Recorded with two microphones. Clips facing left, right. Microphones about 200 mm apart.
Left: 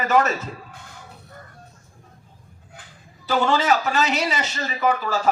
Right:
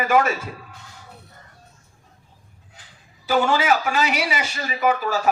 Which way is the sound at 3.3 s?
10° right (ahead or behind).